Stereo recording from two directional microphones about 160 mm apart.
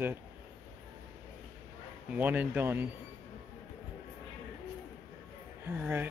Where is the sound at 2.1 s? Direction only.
10° right (ahead or behind).